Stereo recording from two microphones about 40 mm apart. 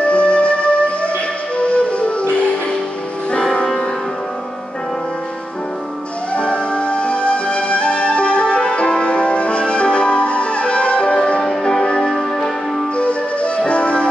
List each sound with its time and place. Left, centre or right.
0.1 s music: left
6.3 s music: left
11.4 s music: centre
12.9 s music: left